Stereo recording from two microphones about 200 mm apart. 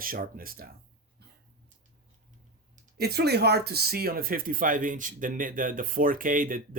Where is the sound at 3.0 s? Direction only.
55° right (ahead or behind).